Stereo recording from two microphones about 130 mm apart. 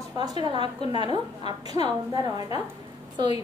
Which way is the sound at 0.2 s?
35° right (ahead or behind).